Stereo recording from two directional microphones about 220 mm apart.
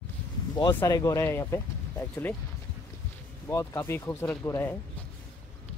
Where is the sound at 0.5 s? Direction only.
15° left (ahead or behind).